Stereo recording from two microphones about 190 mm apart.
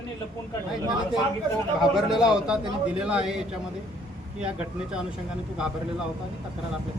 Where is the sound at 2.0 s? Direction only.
Centre (ahead or behind).